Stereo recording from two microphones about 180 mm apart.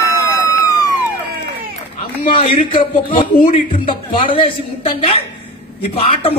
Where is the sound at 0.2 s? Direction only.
20° left (ahead or behind).